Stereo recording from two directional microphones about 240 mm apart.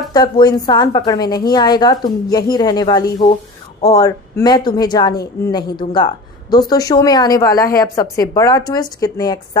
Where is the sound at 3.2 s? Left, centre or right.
Left.